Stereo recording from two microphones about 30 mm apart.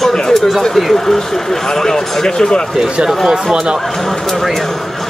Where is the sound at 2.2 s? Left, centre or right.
Left.